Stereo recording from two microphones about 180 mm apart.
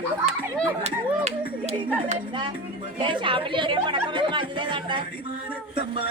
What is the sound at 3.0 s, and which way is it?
Speech, 30° right (ahead or behind).